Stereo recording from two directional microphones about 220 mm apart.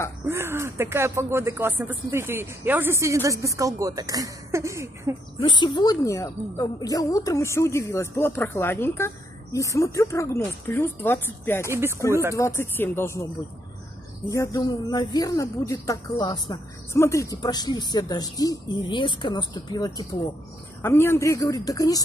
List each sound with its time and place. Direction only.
0.3 s speech: 10° right (ahead or behind)
5.5 s a woman's voice: 20° left (ahead or behind)
12.1 s speech: 10° right (ahead or behind)
12.4 s a woman's voice: 10° left (ahead or behind)
14.3 s a woman's voice: 15° left (ahead or behind)